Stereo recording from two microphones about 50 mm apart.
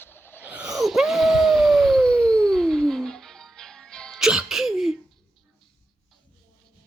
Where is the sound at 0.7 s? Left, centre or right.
Centre.